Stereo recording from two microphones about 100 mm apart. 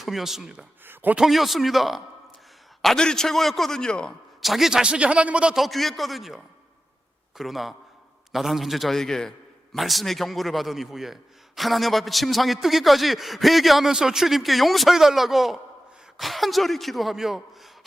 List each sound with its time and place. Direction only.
0.0 s a man's voice: centre (ahead or behind)
0.9 s a man's voice: 15° right (ahead or behind)
1.2 s a man's voice: centre (ahead or behind)